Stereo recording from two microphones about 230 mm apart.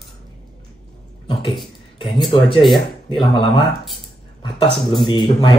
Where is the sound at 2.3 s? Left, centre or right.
Left.